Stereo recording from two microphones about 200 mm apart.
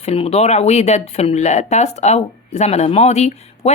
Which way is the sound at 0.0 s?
30° left (ahead or behind).